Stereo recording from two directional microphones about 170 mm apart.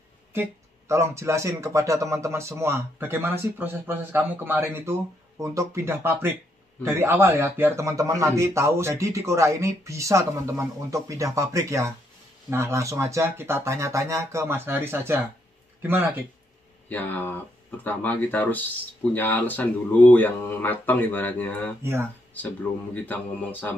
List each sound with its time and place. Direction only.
0.3 s speech: 15° right (ahead or behind)
16.9 s speech: 10° left (ahead or behind)